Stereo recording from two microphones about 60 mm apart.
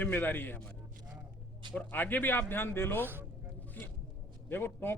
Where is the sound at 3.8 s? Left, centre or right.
Left.